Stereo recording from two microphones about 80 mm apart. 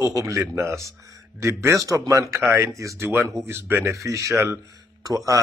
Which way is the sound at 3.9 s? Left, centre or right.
Right.